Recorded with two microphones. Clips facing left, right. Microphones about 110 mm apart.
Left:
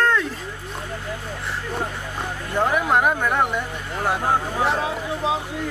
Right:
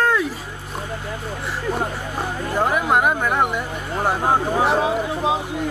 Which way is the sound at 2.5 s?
5° right (ahead or behind).